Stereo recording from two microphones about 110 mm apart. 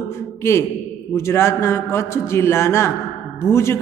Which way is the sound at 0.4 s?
25° left (ahead or behind).